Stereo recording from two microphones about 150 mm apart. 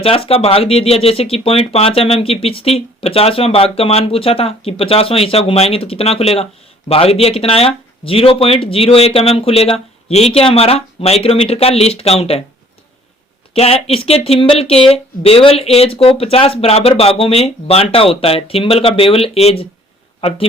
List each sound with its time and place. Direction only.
0.0 s speech: 40° left (ahead or behind)
13.5 s speech: 40° left (ahead or behind)